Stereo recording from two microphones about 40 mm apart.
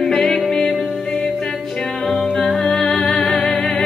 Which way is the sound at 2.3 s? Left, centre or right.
Centre.